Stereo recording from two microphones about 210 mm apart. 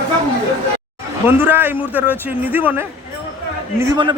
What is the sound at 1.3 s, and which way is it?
Speech, 10° right (ahead or behind).